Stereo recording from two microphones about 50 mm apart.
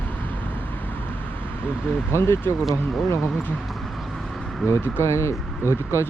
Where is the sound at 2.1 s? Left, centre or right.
Left.